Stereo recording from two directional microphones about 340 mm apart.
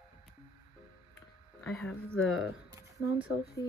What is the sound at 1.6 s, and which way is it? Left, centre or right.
Speech, centre.